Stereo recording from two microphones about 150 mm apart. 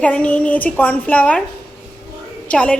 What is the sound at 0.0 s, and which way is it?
A woman's voice, 10° left (ahead or behind).